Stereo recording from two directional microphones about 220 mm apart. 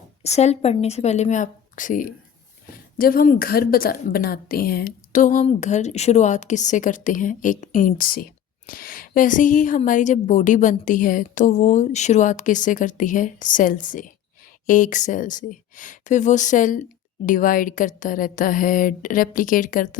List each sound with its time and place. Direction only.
0.2 s speech: 30° left (ahead or behind)